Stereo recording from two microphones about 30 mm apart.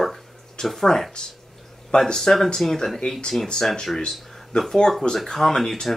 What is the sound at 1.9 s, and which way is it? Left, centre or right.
Speech, left.